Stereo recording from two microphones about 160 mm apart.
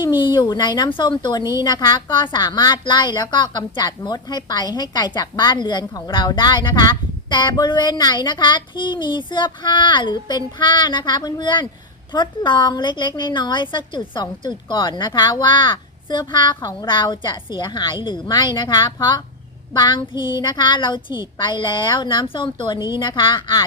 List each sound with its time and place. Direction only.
0.2 s a woman's voice: 30° left (ahead or behind)